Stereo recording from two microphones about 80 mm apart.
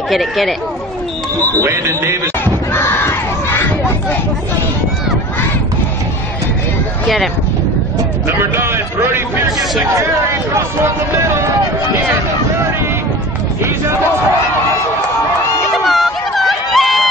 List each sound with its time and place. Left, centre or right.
0.1 s speech: centre
1.6 s speech: right
2.4 s battle cry: left
8.4 s speech: right
10.5 s speech: right
15.7 s chatter: centre